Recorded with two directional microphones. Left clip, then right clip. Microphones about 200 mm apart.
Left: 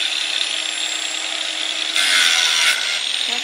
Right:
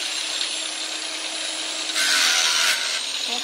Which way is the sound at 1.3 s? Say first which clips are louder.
Left 5 dB; 25° right (ahead or behind).